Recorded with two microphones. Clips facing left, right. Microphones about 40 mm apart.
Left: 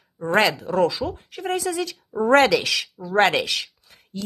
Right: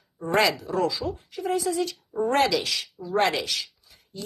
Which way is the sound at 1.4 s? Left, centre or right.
Left.